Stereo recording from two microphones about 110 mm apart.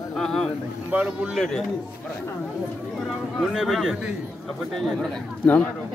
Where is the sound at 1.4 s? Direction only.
5° left (ahead or behind).